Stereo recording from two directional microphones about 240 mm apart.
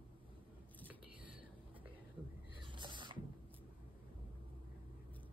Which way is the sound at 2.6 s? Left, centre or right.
Centre.